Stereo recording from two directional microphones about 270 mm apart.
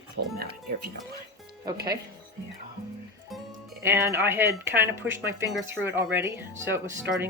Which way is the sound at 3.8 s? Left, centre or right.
Centre.